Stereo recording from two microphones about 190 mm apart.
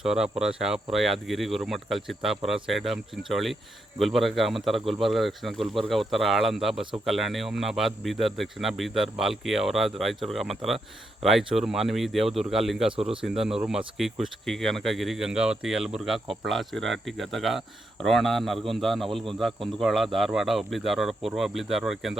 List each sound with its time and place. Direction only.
0.0 s speech: 5° right (ahead or behind)